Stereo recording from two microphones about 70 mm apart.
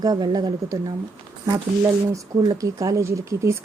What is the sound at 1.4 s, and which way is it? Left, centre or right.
A woman's voice, right.